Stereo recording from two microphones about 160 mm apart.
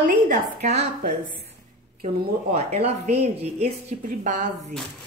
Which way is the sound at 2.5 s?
40° right (ahead or behind).